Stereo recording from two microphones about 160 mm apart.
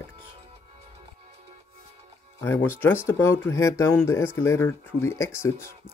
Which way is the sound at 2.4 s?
15° left (ahead or behind).